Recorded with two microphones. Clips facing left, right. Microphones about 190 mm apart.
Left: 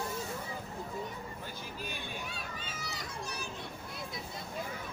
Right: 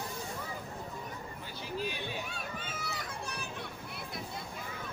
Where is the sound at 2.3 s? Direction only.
55° right (ahead or behind).